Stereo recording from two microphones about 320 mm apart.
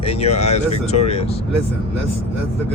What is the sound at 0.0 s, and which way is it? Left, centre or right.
Speech, centre.